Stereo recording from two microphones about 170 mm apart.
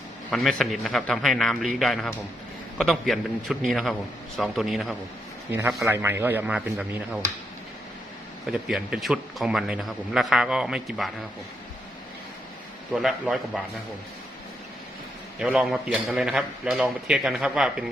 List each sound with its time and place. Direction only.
0.3 s speech: centre (ahead or behind)
5.5 s speech: 15° right (ahead or behind)
8.5 s speech: 5° right (ahead or behind)
12.9 s speech: 5° right (ahead or behind)
15.4 s speech: 5° right (ahead or behind)